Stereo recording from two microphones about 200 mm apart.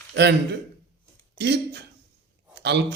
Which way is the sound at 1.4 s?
55° right (ahead or behind).